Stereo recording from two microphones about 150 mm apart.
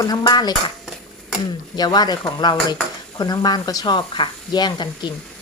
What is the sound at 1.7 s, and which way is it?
Speech, 25° left (ahead or behind).